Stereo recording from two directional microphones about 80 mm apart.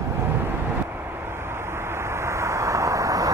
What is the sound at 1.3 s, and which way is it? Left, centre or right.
Vehicle, right.